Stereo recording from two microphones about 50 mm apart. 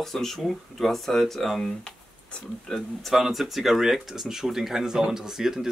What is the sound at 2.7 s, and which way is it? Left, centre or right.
Speech, centre.